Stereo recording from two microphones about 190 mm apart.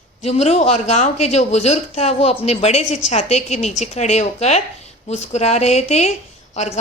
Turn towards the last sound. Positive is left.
turn(degrees=35)  # may be behind; listen again after turning